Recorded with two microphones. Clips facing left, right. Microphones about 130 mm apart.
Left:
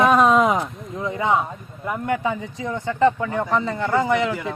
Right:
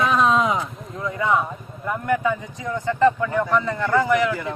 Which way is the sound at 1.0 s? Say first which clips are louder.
Even; 25° left (ahead or behind).